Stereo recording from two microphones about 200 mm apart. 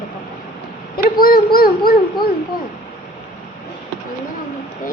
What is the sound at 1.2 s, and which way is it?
Speech, 50° left (ahead or behind).